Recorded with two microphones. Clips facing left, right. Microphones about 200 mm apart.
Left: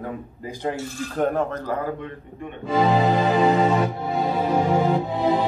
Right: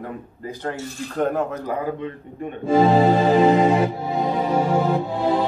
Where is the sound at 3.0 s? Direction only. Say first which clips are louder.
Right 3 dB; 30° right (ahead or behind).